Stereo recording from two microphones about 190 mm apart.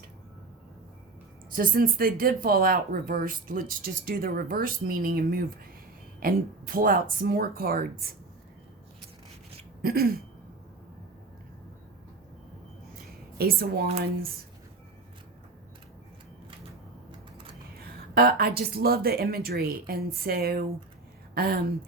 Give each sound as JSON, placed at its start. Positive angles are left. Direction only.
{"t": 1.5, "sound": "speech", "side_deg": -50}
{"t": 9.8, "sound": "speech", "side_deg": -50}
{"t": 13.4, "sound": "speech", "side_deg": -55}
{"t": 17.1, "sound": "a sound", "side_deg": -25}
{"t": 18.1, "sound": "speech", "side_deg": -55}